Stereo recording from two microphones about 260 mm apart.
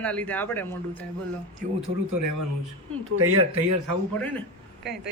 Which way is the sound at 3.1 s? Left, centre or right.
Right.